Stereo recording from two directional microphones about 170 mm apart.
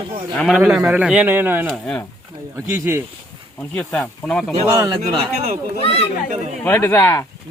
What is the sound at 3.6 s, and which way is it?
Speech, 5° left (ahead or behind).